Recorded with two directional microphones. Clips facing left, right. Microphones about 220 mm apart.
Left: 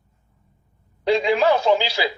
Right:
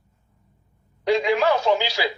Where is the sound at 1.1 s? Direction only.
30° left (ahead or behind).